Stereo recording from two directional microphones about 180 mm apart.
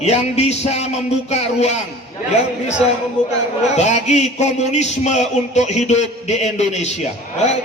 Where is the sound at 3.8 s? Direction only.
40° left (ahead or behind).